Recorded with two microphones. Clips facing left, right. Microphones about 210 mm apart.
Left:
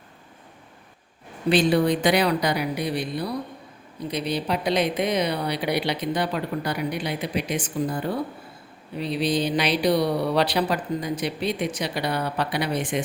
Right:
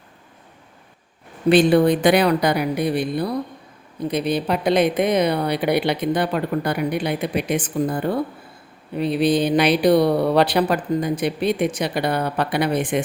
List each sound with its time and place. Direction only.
1.5 s speech: 55° right (ahead or behind)
9.0 s speech: 55° right (ahead or behind)